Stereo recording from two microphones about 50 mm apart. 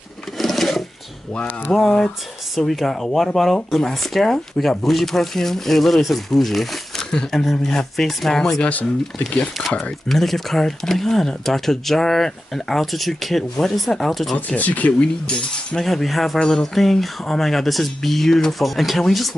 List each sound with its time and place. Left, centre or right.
0.4 s rub: centre
1.3 s speech: left
1.8 s speech: centre
10.0 s speech: centre
14.3 s speech: left
15.2 s speech: centre
15.8 s speech: centre